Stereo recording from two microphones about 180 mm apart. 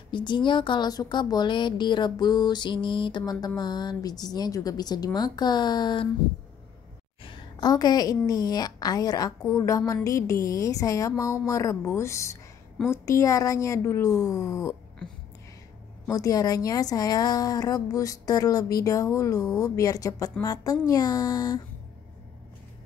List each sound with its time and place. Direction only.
0.1 s speech: 25° left (ahead or behind)
7.2 s a woman's voice: 20° left (ahead or behind)
16.1 s speech: 20° left (ahead or behind)